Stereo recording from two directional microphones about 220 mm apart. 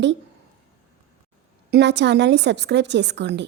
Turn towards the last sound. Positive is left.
turn(degrees=-50)  # may be behind; listen again after turning